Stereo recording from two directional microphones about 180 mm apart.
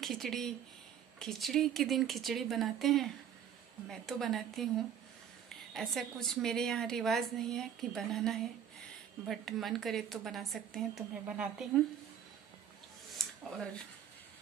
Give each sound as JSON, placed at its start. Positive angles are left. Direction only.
{"t": 0.0, "sound": "a woman's voice", "side_deg": 0}
{"t": 5.7, "sound": "a woman's voice", "side_deg": 0}